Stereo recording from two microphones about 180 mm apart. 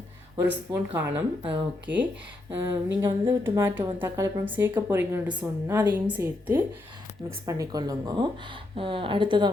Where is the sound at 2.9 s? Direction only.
20° right (ahead or behind).